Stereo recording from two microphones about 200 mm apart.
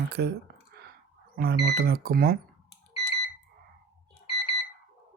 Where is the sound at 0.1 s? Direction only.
50° right (ahead or behind).